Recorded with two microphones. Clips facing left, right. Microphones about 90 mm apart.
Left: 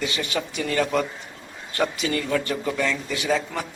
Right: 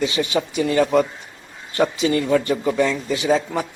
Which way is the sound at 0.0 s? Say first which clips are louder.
Right 6 dB; 20° right (ahead or behind).